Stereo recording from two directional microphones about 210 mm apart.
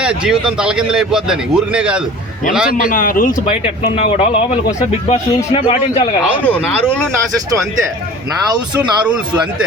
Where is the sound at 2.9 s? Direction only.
40° left (ahead or behind).